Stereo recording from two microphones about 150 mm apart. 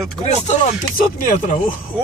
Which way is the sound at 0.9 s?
55° left (ahead or behind).